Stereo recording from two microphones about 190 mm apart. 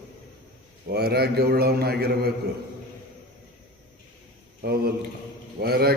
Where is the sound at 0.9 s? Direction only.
55° right (ahead or behind).